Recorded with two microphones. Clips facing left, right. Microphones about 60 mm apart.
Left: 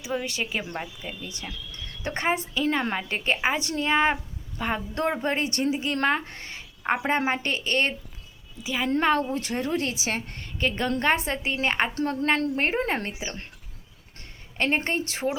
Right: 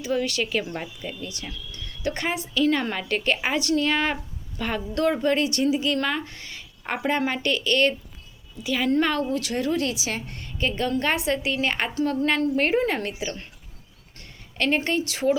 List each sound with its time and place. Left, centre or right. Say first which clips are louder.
0.0 s a woman's voice: right 4 dB; centre
0.6 s speech: right 1 dB; centre
1.0 s a woman's voice: right 2 dB; left
8.9 s a woman's voice: left 1 dB; left
14.8 s a woman's voice: right 2 dB; left